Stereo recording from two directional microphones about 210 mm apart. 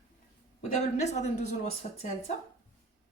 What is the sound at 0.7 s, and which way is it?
Speech, 35° left (ahead or behind).